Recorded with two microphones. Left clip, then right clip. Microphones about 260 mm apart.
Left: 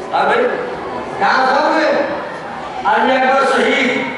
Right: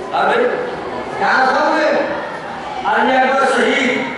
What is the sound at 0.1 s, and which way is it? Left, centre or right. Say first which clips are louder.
A man's voice: left 1 dB; centre.